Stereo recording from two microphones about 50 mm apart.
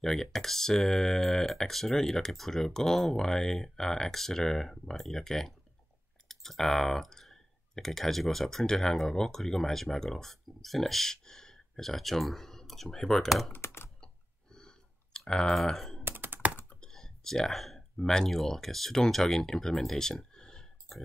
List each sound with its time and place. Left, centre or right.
0.0 s speech: centre
13.5 s computer keyboard: left
14.0 s clicking: centre
15.5 s speech: centre
16.0 s computer keyboard: right
16.8 s speech: centre